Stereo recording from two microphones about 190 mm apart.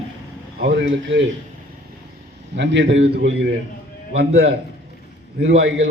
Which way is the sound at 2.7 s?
75° right (ahead or behind).